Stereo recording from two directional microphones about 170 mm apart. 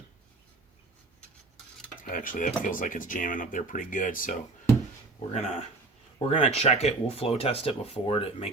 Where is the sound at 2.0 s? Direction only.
50° left (ahead or behind).